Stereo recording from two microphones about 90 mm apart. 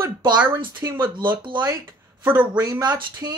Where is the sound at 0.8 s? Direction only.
25° right (ahead or behind).